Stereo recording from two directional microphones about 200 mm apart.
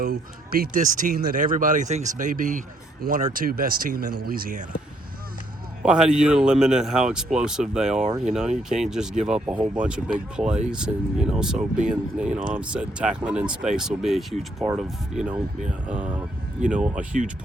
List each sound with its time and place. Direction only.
0.0 s speech: 50° right (ahead or behind)
5.8 s a man's voice: 5° right (ahead or behind)
16.6 s a man's voice: 5° right (ahead or behind)